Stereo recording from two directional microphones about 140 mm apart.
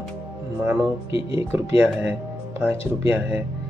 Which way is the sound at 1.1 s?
40° left (ahead or behind).